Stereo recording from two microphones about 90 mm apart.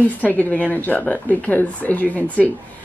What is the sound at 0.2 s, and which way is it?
Speech, 15° left (ahead or behind).